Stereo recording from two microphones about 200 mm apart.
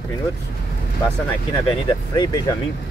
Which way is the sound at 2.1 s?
20° left (ahead or behind).